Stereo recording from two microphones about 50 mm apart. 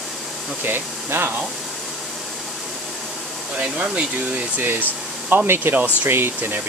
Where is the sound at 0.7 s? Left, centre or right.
Right.